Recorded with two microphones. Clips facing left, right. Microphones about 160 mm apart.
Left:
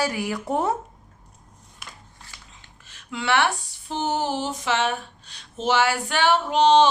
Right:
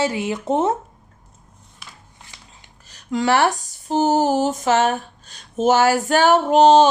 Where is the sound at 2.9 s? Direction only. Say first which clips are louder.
Right 5 dB; 40° right (ahead or behind).